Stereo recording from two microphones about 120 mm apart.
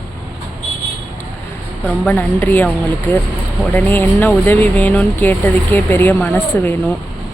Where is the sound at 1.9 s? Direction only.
15° left (ahead or behind).